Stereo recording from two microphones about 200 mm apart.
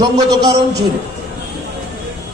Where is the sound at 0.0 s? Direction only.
20° right (ahead or behind).